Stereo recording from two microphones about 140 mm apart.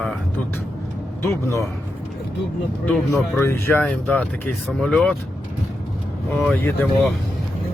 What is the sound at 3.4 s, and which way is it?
Speech, 15° left (ahead or behind).